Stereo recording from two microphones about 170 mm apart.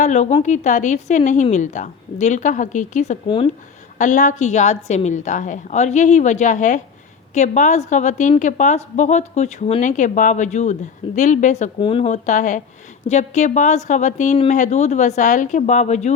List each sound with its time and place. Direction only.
0.0 s a woman's voice: 45° left (ahead or behind)
3.2 s speech: 30° left (ahead or behind)
3.9 s a woman's voice: 50° left (ahead or behind)
11.8 s a woman's voice: 30° left (ahead or behind)